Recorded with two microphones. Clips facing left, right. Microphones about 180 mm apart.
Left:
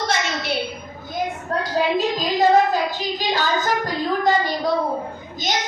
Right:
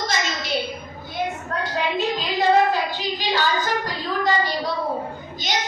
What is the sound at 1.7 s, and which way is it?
Child singing, 40° left (ahead or behind).